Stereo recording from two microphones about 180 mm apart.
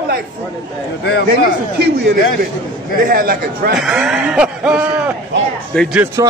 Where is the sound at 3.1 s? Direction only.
55° right (ahead or behind).